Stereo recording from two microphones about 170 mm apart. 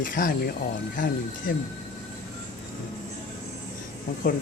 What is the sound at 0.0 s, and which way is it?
Speech, 55° left (ahead or behind).